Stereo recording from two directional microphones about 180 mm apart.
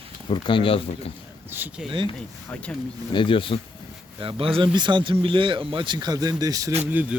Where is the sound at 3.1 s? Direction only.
25° left (ahead or behind).